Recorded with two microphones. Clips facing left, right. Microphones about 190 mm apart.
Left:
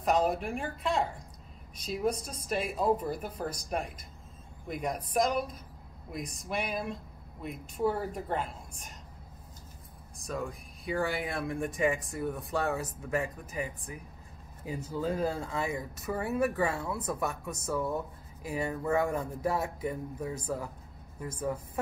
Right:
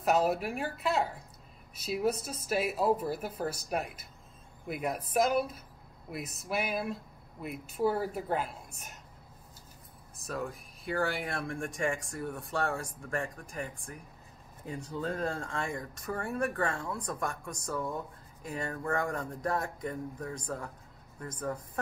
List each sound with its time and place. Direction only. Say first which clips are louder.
0.0 s speech: even; 5° right (ahead or behind)
10.1 s speech: left 1 dB; centre (ahead or behind)